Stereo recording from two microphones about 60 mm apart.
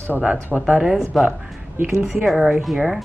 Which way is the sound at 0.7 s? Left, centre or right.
Centre.